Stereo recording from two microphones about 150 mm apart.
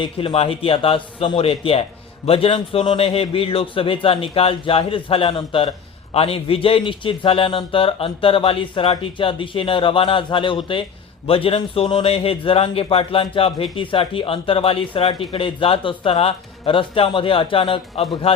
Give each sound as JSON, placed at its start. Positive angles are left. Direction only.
{"t": 0.0, "sound": "a man's voice", "side_deg": 35}